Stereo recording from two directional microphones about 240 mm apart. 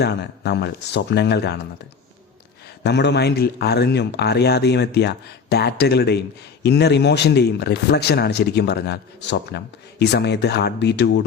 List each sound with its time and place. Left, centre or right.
0.0 s speech: left
2.8 s speech: left